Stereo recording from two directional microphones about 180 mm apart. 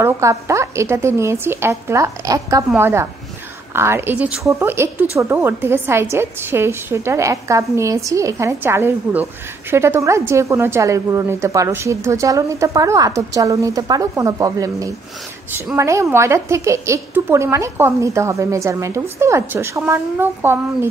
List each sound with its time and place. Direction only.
0.0 s a woman's voice: 15° right (ahead or behind)